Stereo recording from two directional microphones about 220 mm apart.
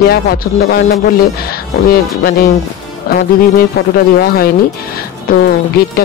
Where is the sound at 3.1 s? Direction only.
45° left (ahead or behind).